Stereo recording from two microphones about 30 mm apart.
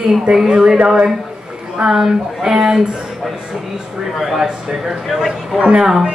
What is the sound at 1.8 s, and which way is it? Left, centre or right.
Speech, centre.